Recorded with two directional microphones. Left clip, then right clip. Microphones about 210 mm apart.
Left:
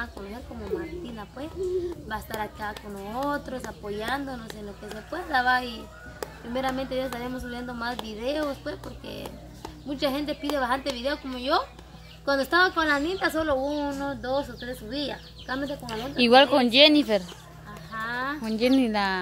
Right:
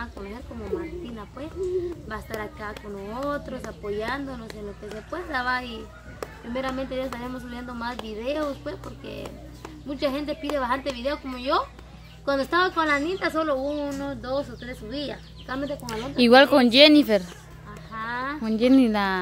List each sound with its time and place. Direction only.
0.7 s a woman's voice: 15° left (ahead or behind)
16.2 s speech: 15° right (ahead or behind)
17.9 s a sound: 10° left (ahead or behind)
18.4 s speech: 15° right (ahead or behind)